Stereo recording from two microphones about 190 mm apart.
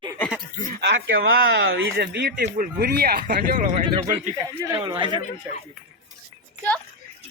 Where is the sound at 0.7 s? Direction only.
60° right (ahead or behind).